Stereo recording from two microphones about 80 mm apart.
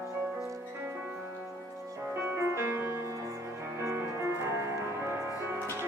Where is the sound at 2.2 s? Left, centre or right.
Right.